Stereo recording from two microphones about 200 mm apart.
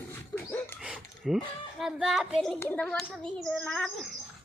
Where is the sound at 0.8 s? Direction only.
5° right (ahead or behind).